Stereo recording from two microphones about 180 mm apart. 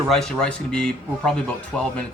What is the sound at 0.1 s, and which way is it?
Speech, 5° left (ahead or behind).